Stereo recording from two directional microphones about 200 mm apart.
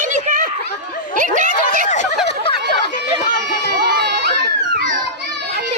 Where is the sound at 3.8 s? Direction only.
55° right (ahead or behind).